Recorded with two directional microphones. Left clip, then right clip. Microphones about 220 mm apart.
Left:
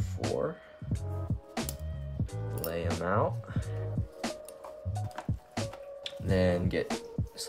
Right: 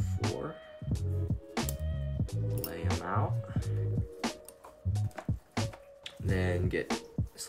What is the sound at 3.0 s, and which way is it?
Speech, 40° left (ahead or behind).